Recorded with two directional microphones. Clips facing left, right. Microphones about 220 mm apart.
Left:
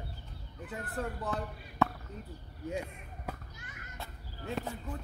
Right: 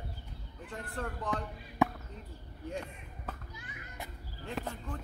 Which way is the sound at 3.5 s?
45° left (ahead or behind).